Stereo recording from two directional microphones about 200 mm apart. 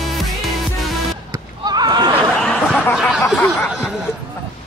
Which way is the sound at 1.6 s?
20° right (ahead or behind).